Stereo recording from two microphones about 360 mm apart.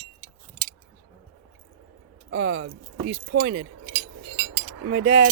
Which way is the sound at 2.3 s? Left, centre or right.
Right.